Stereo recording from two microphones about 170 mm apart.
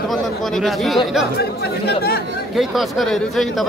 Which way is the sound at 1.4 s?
70° left (ahead or behind).